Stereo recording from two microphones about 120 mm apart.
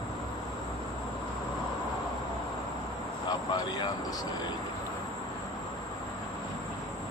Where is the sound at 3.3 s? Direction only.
35° left (ahead or behind).